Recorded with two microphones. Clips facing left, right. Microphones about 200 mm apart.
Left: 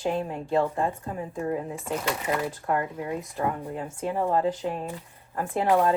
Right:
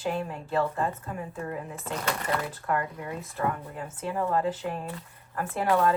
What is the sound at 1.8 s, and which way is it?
Speech, 5° left (ahead or behind).